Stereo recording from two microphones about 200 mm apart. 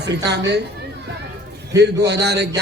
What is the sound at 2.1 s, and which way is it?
Speech, 55° right (ahead or behind).